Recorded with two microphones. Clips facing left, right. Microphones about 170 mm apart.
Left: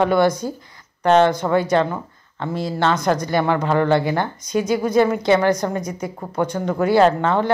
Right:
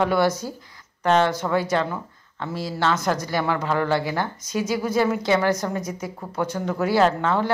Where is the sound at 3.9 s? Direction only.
60° left (ahead or behind).